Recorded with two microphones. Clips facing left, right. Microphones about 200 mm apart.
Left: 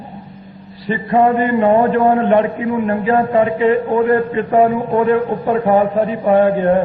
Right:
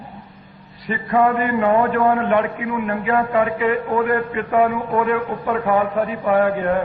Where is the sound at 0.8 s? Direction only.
30° left (ahead or behind).